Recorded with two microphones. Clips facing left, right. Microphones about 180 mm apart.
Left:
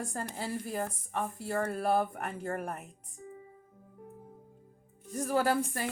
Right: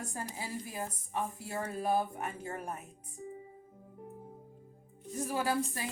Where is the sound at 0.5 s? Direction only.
55° left (ahead or behind).